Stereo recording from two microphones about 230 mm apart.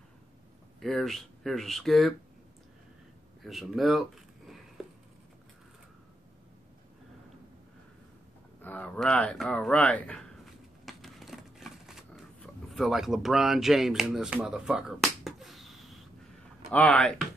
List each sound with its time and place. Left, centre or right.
0.7 s speech: centre
3.4 s speech: centre
8.6 s speech: centre
10.9 s a sound: centre
16.7 s speech: centre